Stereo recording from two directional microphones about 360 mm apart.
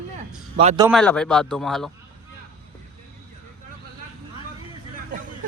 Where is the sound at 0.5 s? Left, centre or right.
Centre.